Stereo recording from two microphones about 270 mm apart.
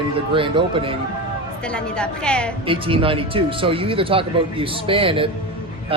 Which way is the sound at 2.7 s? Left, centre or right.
Centre.